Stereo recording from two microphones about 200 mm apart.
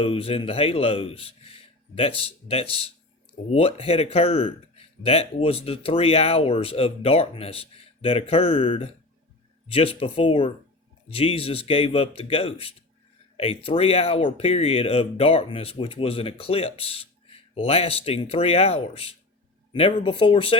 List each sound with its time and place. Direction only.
0.0 s speech: 30° left (ahead or behind)